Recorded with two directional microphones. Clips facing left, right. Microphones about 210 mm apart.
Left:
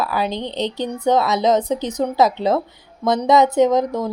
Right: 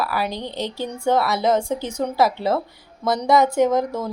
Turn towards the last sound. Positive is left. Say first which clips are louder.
# left 3 dB
turn(degrees=15)  # may be behind; listen again after turning